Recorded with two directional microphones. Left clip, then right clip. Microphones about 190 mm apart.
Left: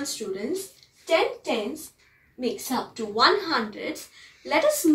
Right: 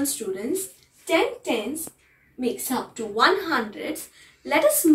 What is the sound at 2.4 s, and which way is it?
A woman's voice, 15° left (ahead or behind).